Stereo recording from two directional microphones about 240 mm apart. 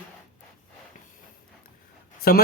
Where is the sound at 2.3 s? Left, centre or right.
Left.